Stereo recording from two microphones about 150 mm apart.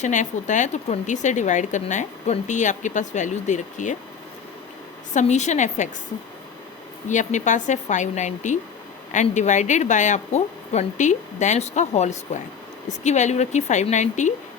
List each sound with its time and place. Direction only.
0.0 s speech: 55° left (ahead or behind)
5.1 s speech: 50° left (ahead or behind)
7.1 s speech: 55° left (ahead or behind)